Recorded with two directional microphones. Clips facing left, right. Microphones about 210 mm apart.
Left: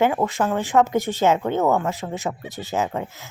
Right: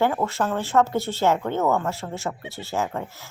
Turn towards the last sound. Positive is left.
turn(degrees=20)  # may be behind; listen again after turning